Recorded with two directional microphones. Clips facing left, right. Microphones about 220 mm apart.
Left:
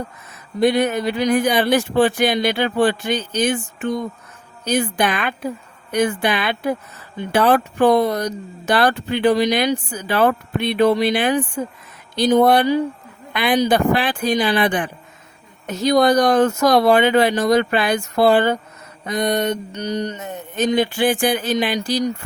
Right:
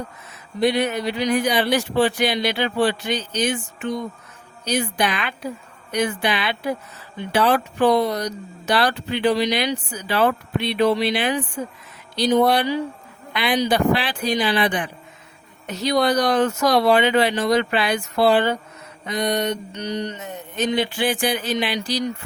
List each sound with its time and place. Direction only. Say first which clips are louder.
0.6 s speech: left 3 dB; 50° left (ahead or behind)